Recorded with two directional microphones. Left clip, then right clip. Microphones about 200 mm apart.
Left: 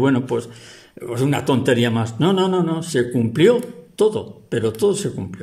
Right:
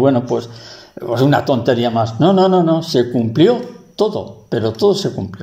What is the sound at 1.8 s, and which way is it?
Speech, 40° left (ahead or behind).